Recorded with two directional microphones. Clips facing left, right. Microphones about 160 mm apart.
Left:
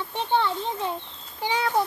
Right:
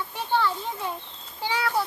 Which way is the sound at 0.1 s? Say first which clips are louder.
Left 2 dB; 20° left (ahead or behind).